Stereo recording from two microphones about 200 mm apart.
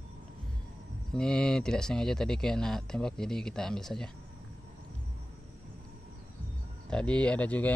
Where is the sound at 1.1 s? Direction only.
5° left (ahead or behind).